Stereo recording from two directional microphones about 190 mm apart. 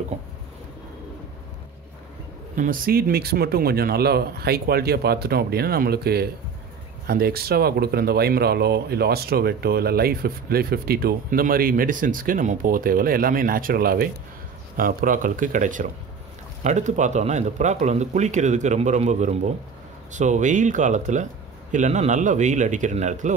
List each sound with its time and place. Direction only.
2.5 s speech: 45° right (ahead or behind)